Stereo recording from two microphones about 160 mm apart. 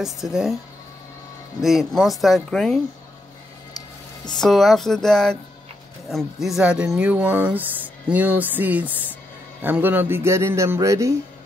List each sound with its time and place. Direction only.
0.0 s speech: 5° right (ahead or behind)
1.6 s speech: centre (ahead or behind)
4.4 s speech: centre (ahead or behind); by 11.1 s 20° right (ahead or behind)